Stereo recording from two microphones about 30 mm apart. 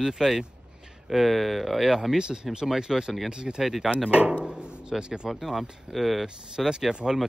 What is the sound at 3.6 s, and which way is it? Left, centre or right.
Speech, centre.